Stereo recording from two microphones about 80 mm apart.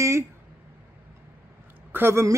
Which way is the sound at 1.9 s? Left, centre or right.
Right.